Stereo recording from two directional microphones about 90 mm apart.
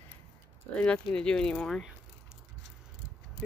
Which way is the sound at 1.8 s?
10° right (ahead or behind).